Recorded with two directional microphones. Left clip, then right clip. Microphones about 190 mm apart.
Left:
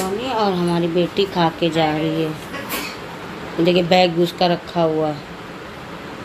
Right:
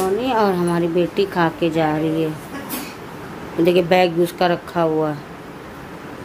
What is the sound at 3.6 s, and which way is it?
Speech, 10° right (ahead or behind).